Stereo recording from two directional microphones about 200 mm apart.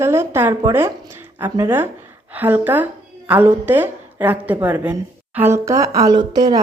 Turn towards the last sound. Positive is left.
turn(degrees=-20)  # may be behind; listen again after turning